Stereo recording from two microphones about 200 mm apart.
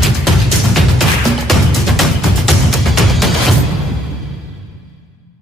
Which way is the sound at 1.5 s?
Centre (ahead or behind).